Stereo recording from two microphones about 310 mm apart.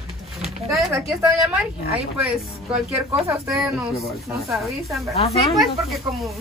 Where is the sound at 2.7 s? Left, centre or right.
Centre.